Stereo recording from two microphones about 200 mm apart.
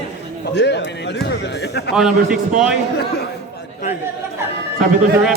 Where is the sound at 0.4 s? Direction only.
60° left (ahead or behind).